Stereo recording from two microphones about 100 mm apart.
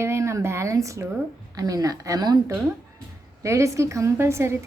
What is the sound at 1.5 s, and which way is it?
Speech, 35° right (ahead or behind).